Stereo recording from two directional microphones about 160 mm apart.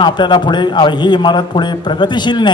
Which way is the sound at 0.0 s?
30° left (ahead or behind).